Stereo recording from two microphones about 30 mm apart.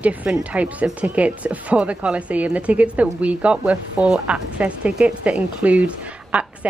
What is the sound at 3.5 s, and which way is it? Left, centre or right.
Speech, right.